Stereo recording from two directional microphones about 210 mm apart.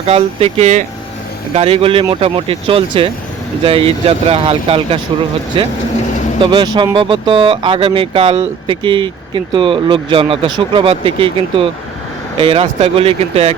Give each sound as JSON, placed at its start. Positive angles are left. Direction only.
{"t": 0.0, "sound": "speech", "side_deg": -30}